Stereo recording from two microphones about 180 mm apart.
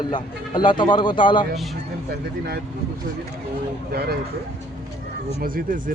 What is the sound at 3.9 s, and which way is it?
Speech, 60° right (ahead or behind).